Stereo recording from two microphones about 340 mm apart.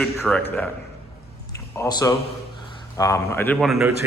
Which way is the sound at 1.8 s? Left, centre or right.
Centre.